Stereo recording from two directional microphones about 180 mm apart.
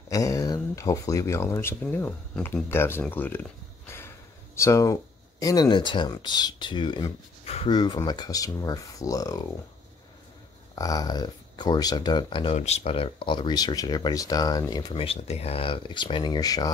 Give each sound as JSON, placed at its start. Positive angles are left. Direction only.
{"t": 0.1, "sound": "speech", "side_deg": 20}
{"t": 10.7, "sound": "speech", "side_deg": 20}